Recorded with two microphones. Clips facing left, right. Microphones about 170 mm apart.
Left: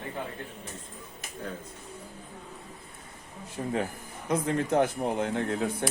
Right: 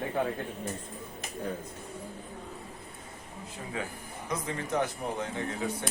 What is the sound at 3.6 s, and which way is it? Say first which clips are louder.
Speech: left 10 dB; 40° left (ahead or behind).